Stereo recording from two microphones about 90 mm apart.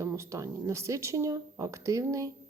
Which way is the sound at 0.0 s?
35° right (ahead or behind).